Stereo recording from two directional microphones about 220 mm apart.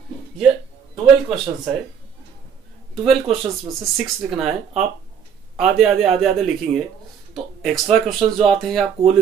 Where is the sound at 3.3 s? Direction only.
30° right (ahead or behind).